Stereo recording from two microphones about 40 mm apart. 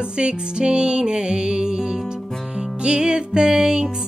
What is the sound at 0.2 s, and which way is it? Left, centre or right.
Music, right.